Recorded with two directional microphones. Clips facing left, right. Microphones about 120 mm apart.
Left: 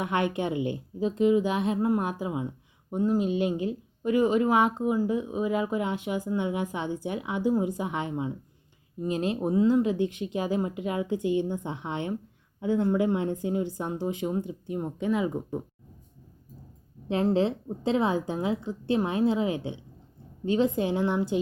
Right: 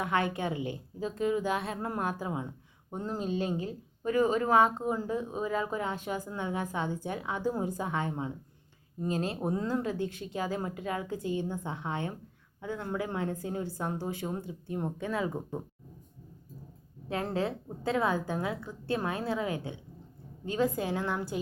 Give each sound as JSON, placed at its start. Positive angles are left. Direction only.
{"t": 0.0, "sound": "a woman's voice", "side_deg": 20}
{"t": 11.1, "sound": "a woman's voice", "side_deg": -40}
{"t": 11.6, "sound": "a woman's voice", "side_deg": 20}
{"t": 17.1, "sound": "a woman's voice", "side_deg": 25}